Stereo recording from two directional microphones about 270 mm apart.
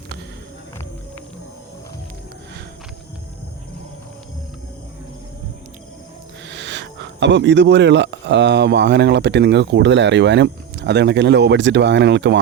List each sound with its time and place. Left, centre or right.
6.5 s speech: right